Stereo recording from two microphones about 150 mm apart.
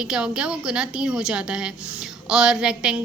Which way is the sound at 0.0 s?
5° right (ahead or behind).